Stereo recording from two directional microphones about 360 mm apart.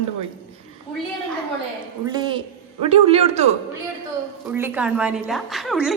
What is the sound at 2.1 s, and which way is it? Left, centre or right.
A woman's voice, centre.